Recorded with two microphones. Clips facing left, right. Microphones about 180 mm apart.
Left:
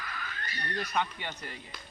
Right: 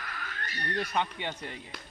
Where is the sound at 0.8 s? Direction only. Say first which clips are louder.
Right 1 dB; 25° right (ahead or behind).